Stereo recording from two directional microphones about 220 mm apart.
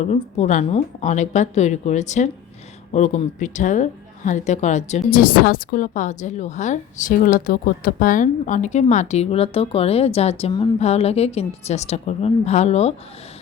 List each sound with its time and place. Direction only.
0.0 s a woman's voice: 30° left (ahead or behind)